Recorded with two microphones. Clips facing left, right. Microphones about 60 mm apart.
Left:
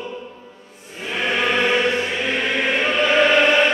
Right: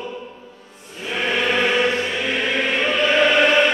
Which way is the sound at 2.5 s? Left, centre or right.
Centre.